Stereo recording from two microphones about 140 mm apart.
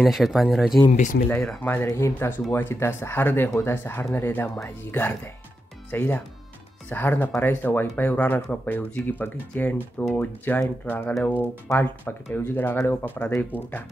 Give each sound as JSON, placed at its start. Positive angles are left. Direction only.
{"t": 0.0, "sound": "speech", "side_deg": 0}
{"t": 0.9, "sound": "speech", "side_deg": 65}
{"t": 1.3, "sound": "speech", "side_deg": 10}